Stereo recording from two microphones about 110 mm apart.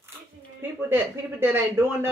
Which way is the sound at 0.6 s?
20° right (ahead or behind).